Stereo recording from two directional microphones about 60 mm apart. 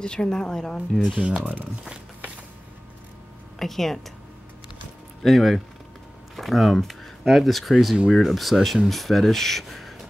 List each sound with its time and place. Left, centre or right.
0.0 s a woman's voice: centre
1.2 s speech: centre
3.5 s speech: centre
5.2 s speech: centre